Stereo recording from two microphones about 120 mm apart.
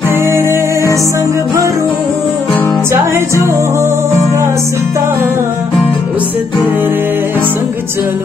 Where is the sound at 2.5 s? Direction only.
15° left (ahead or behind).